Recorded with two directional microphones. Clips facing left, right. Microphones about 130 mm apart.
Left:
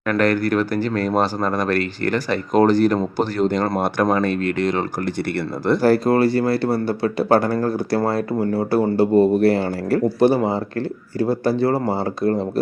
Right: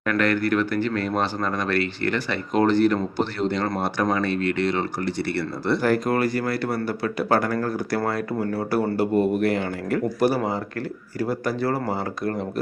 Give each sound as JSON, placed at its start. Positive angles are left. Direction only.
{"t": 0.1, "sound": "speech", "side_deg": 40}